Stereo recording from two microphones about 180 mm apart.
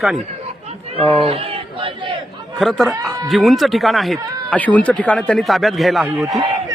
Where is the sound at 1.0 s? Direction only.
35° right (ahead or behind).